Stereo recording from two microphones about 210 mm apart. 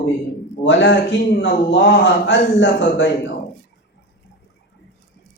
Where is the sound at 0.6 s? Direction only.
60° left (ahead or behind).